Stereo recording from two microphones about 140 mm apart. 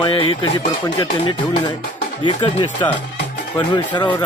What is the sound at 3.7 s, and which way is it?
Speech, 30° left (ahead or behind).